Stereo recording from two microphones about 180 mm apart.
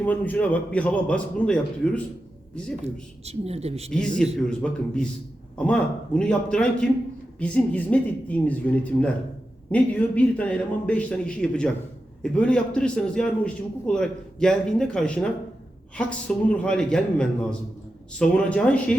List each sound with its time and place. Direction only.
0.0 s a man's voice: 10° left (ahead or behind)
2.8 s speech: 35° right (ahead or behind)
4.4 s a man's voice: 5° left (ahead or behind)